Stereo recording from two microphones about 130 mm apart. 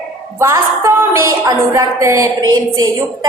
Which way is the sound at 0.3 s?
25° right (ahead or behind).